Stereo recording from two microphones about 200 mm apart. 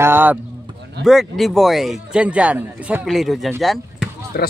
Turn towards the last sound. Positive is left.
turn(degrees=50)  # may be behind; listen again after turning